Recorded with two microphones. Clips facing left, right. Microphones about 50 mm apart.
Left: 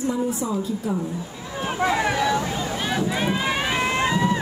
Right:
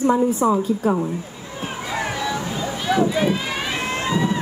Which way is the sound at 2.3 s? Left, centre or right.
Centre.